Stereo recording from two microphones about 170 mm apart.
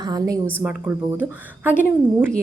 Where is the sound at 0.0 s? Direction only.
25° right (ahead or behind).